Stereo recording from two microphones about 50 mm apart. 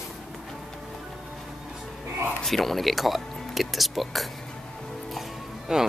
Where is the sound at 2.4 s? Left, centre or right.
Centre.